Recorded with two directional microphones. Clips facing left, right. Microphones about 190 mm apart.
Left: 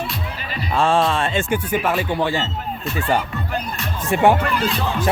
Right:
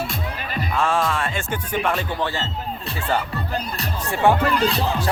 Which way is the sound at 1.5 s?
5° left (ahead or behind).